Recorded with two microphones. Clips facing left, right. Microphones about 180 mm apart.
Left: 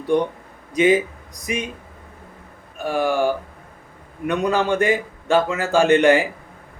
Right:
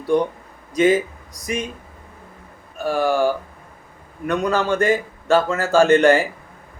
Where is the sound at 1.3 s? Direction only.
40° right (ahead or behind).